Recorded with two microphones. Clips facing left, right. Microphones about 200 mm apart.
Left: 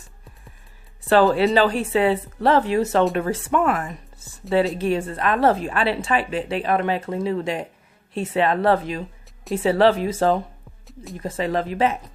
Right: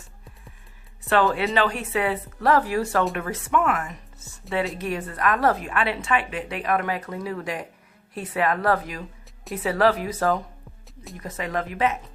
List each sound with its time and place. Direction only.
1.0 s a woman's voice: 35° left (ahead or behind)
10.8 s music: centre (ahead or behind)
11.2 s a woman's voice: 30° left (ahead or behind)